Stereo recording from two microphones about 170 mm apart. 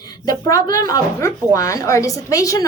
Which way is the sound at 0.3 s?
20° left (ahead or behind).